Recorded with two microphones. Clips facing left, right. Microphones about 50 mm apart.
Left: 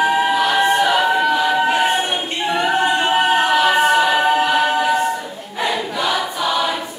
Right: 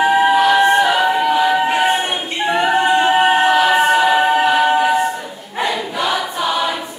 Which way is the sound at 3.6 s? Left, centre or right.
Centre.